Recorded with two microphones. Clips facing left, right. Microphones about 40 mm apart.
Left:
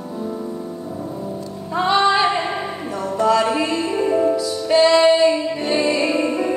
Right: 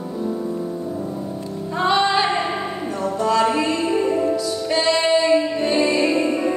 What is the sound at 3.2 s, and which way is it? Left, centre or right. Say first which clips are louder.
Music: left 1 dB; centre.